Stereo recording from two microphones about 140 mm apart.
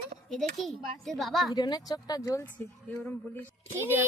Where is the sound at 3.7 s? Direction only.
15° right (ahead or behind).